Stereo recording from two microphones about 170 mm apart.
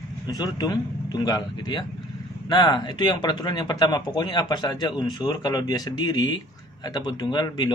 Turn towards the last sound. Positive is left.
turn(degrees=25)  # may be behind; listen again after turning